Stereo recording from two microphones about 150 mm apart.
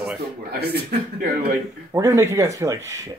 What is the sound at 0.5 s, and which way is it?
Speech, 90° right.